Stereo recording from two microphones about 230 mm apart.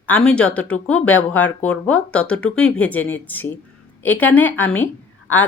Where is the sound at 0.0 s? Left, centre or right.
Centre.